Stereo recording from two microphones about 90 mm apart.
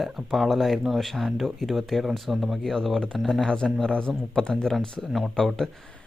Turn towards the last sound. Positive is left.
turn(degrees=5)  # may be behind; listen again after turning